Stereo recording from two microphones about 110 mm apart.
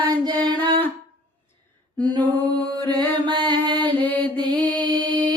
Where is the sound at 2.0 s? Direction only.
40° right (ahead or behind).